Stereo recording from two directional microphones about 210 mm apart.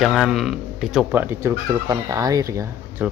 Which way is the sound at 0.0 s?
Centre (ahead or behind).